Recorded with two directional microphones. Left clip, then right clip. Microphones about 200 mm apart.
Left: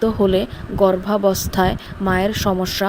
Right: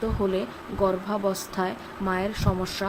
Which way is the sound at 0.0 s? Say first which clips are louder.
Left 10 dB; 35° left (ahead or behind).